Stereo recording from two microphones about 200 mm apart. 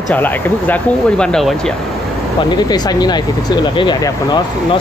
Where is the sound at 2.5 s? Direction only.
20° left (ahead or behind).